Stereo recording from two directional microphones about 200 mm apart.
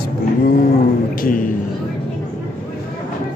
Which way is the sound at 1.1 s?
45° left (ahead or behind).